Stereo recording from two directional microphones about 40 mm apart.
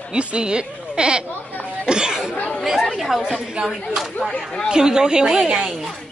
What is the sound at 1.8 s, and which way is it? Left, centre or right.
Chatter, centre.